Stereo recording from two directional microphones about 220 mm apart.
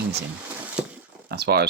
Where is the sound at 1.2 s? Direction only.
45° right (ahead or behind).